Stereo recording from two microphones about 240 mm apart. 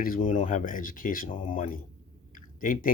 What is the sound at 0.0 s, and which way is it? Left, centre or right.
Speech, left.